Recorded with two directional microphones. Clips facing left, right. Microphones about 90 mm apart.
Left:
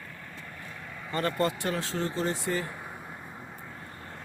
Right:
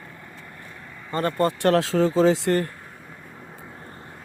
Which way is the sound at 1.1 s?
35° right (ahead or behind).